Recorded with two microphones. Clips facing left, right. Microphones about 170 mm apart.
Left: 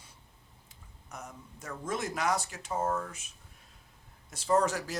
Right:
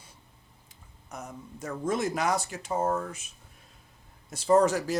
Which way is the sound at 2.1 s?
30° right (ahead or behind).